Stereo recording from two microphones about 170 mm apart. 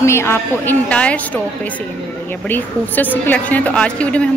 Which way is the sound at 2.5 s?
10° left (ahead or behind).